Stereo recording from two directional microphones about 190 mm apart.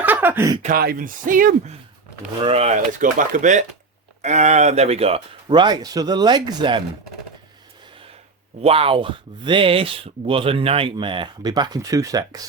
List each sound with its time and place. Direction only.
0.0 s a sound: 10° right (ahead or behind)
0.6 s speech: 50° right (ahead or behind)
2.4 s speech: 30° right (ahead or behind)
8.6 s speech: 30° right (ahead or behind)